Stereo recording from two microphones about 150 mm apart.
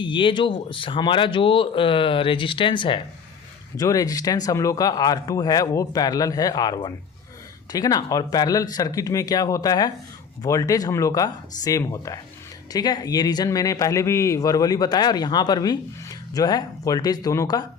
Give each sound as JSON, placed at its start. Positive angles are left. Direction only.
{"t": 0.0, "sound": "a man's voice", "side_deg": 35}